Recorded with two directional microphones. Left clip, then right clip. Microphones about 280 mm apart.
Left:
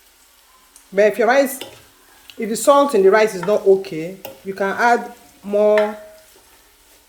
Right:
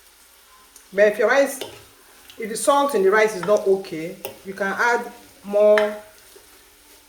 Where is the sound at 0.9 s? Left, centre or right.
Left.